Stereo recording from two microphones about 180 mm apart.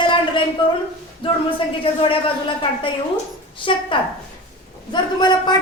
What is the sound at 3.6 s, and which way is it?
Speech, 30° left (ahead or behind).